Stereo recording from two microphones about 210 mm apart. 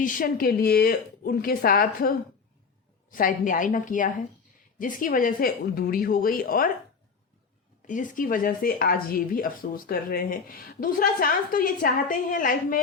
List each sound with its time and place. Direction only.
0.0 s a woman's voice: 40° left (ahead or behind)
7.9 s speech: 40° left (ahead or behind)